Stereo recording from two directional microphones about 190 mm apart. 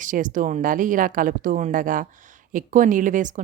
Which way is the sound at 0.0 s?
45° right (ahead or behind).